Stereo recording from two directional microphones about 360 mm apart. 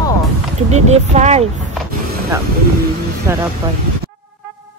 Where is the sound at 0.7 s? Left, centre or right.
Centre.